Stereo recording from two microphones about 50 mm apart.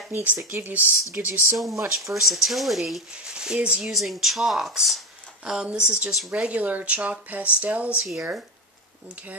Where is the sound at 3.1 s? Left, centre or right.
Centre.